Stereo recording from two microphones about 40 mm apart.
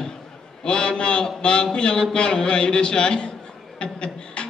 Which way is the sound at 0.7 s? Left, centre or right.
Left.